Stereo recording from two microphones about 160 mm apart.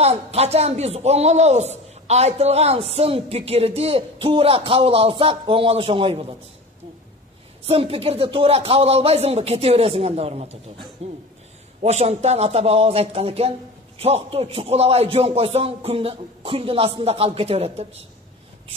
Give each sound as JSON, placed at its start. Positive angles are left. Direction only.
{"t": 0.0, "sound": "a man's voice", "side_deg": -40}
{"t": 7.6, "sound": "a man's voice", "side_deg": -35}